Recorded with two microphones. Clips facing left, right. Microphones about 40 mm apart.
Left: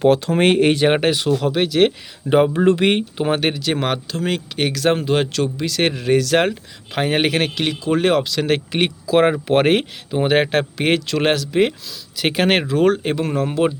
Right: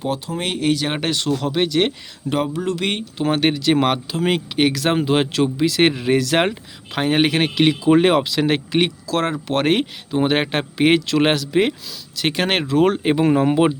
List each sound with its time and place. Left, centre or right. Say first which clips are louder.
0.0 s speech: left 9 dB; left
0.9 s speech: left 5 dB; centre
2.5 s speech: left 7 dB; left
2.8 s speech: left 4 dB; centre
3.4 s speech: right 3 dB; centre
8.7 s speech: left 2 dB; centre